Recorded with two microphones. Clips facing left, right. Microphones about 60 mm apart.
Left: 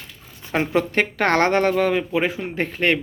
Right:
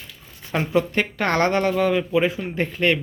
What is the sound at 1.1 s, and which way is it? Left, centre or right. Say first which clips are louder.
Speech: left 3 dB; left.